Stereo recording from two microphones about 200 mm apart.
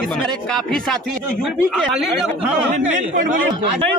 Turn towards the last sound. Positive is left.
turn(degrees=-35)  # may be behind; listen again after turning